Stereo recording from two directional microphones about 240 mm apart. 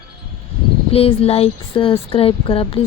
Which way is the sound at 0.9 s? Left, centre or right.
Left.